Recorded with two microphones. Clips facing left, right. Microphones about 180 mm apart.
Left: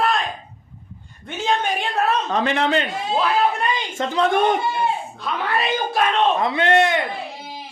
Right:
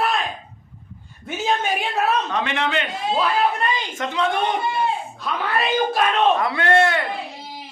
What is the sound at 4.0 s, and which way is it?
Speech, 35° left (ahead or behind).